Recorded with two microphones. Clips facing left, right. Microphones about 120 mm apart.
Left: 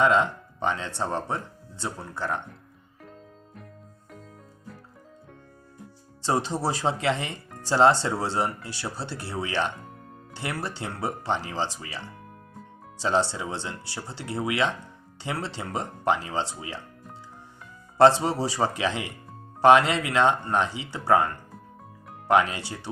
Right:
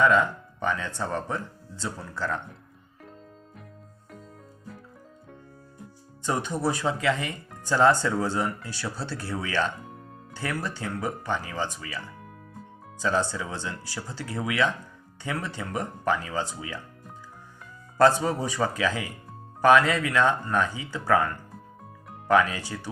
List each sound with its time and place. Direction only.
0.0 s speech: 25° left (ahead or behind)
6.2 s speech: 30° left (ahead or behind)
17.9 s speech: 25° left (ahead or behind)